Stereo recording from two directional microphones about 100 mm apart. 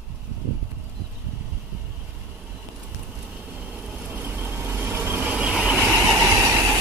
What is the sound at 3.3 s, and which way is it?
Vehicle, 15° right (ahead or behind).